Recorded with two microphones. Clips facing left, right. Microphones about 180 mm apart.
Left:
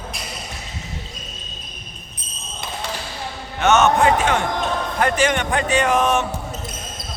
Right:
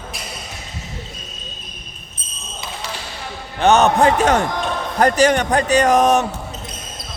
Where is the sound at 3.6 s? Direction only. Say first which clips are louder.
Right 2 dB; 35° right (ahead or behind).